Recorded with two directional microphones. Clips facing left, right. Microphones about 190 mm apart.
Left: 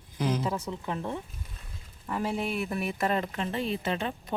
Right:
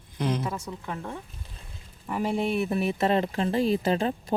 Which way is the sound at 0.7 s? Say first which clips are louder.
Left 2 dB; 20° left (ahead or behind).